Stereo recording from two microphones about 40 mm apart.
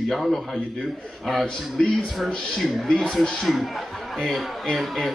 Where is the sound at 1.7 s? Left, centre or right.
Centre.